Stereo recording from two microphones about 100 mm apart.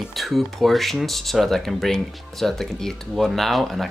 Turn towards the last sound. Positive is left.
turn(degrees=0)  # may be behind; listen again after turning